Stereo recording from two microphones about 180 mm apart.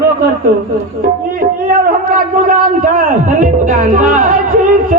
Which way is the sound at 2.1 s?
50° right (ahead or behind).